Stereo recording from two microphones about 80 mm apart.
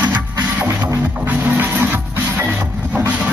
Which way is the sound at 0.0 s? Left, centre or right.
Centre.